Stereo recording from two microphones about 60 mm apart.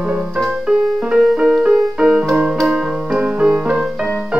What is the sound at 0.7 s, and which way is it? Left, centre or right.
Music, right.